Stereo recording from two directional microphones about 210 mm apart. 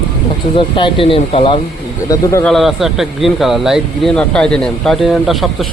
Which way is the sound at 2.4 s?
Centre (ahead or behind).